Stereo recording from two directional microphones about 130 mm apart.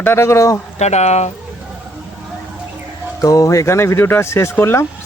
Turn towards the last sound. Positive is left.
turn(degrees=20)  # may be behind; listen again after turning